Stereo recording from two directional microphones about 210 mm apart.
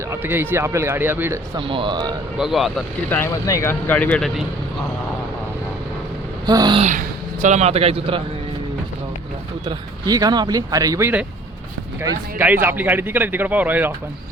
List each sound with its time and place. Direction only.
0.1 s a man's voice: 10° right (ahead or behind)
1.5 s a man's voice: 25° right (ahead or behind)
2.4 s speech: centre (ahead or behind)
6.4 s a sound: 20° right (ahead or behind)
7.4 s a man's voice: 35° right (ahead or behind)
9.6 s a man's voice: 15° right (ahead or behind)